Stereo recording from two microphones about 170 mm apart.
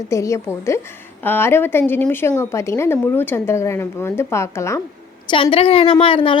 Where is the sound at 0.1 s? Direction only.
15° left (ahead or behind).